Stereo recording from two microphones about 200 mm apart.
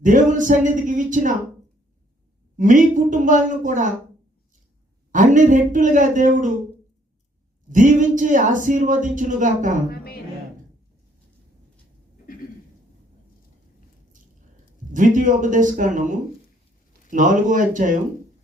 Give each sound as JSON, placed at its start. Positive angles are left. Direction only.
{"t": 0.0, "sound": "speech", "side_deg": -40}
{"t": 2.6, "sound": "speech", "side_deg": -40}
{"t": 5.1, "sound": "speech", "side_deg": -40}
{"t": 7.7, "sound": "speech", "side_deg": -40}
{"t": 9.9, "sound": "a woman's voice", "side_deg": 50}
{"t": 14.1, "sound": "a sound", "side_deg": -40}
{"t": 17.1, "sound": "speech", "side_deg": -40}